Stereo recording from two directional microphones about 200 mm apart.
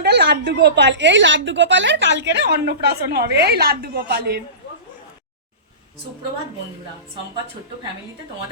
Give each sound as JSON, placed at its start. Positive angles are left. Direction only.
{"t": 0.0, "sound": "a woman's voice", "side_deg": -55}